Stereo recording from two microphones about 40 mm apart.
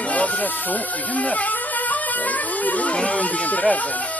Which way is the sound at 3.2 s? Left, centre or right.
Left.